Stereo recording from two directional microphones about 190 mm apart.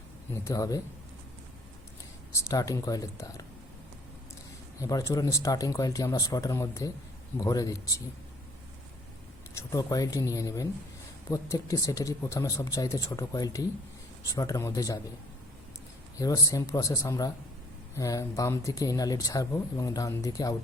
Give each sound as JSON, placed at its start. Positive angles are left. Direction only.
{"t": 0.4, "sound": "a man's voice", "side_deg": 20}
{"t": 2.3, "sound": "speech", "side_deg": 20}
{"t": 4.8, "sound": "speech", "side_deg": 15}
{"t": 9.6, "sound": "speech", "side_deg": 20}
{"t": 16.1, "sound": "speech", "side_deg": 20}